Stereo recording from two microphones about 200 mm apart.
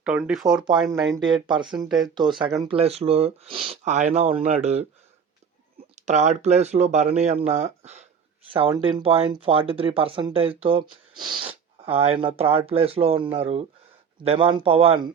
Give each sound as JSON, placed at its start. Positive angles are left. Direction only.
{"t": 0.0, "sound": "speech", "side_deg": -5}
{"t": 0.4, "sound": "speech", "side_deg": -20}
{"t": 6.1, "sound": "speech", "side_deg": -35}